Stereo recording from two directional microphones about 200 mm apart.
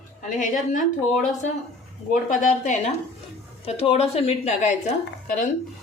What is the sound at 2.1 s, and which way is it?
Speech, 40° left (ahead or behind).